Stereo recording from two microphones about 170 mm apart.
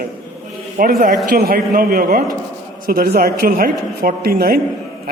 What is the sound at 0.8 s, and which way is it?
A man's voice, 55° right (ahead or behind).